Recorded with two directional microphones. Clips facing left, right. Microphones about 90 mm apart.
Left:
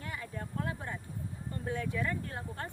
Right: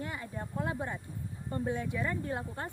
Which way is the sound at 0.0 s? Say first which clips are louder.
Right 2 dB; 25° right (ahead or behind).